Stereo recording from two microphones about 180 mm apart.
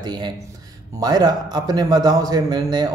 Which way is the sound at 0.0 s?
25° right (ahead or behind).